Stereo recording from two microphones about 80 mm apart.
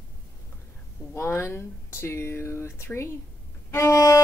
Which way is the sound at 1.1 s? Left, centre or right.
Left.